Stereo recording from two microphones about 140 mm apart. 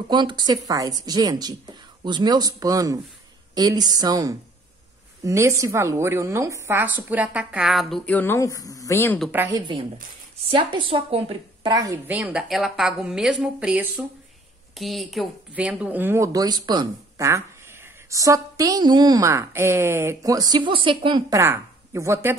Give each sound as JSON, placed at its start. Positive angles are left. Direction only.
{"t": 0.1, "sound": "a woman's voice", "side_deg": -35}
{"t": 9.3, "sound": "a woman's voice", "side_deg": -20}
{"t": 9.6, "sound": "a woman's voice", "side_deg": -35}
{"t": 11.7, "sound": "a woman's voice", "side_deg": -25}
{"t": 12.1, "sound": "a woman's voice", "side_deg": -5}
{"t": 21.3, "sound": "speech", "side_deg": -20}